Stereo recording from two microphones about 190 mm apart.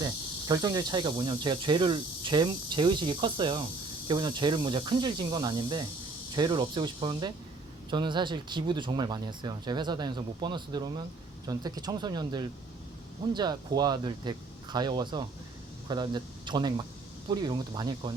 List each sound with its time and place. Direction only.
0.0 s speech: 20° right (ahead or behind)